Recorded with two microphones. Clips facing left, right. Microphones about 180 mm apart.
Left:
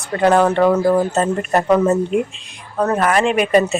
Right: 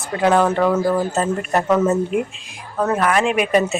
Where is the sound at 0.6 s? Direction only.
15° left (ahead or behind).